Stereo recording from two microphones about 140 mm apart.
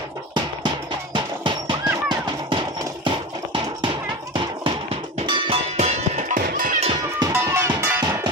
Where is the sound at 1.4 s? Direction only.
35° right (ahead or behind).